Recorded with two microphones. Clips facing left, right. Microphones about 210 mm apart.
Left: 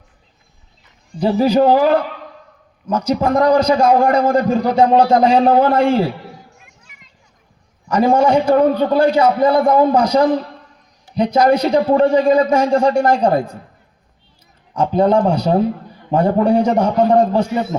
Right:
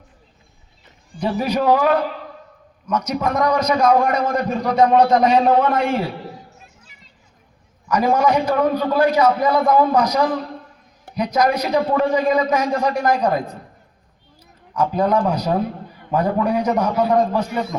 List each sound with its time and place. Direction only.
1.2 s a man's voice: 30° left (ahead or behind)
6.6 s a sound: 35° right (ahead or behind)
7.9 s a man's voice: 30° left (ahead or behind)
14.7 s a man's voice: 30° left (ahead or behind)